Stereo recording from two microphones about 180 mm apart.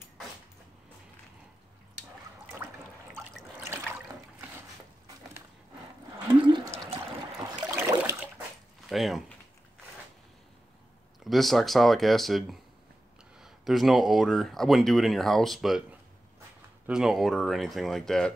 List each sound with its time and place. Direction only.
2.6 s water: 10° right (ahead or behind)
6.4 s a sound: 25° right (ahead or behind)
8.8 s speech: centre (ahead or behind)
11.2 s speech: centre (ahead or behind)
16.8 s speech: 5° right (ahead or behind)